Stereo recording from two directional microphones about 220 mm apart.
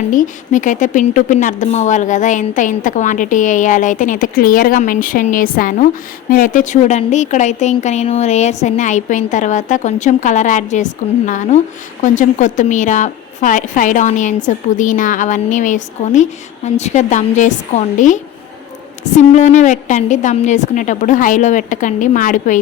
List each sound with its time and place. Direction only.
0.1 s a woman's voice: 35° left (ahead or behind)